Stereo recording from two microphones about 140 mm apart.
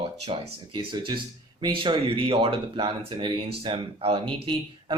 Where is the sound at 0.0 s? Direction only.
45° right (ahead or behind).